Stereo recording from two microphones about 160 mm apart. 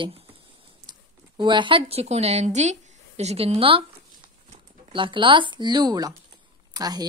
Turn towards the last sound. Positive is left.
turn(degrees=-25)  # may be behind; listen again after turning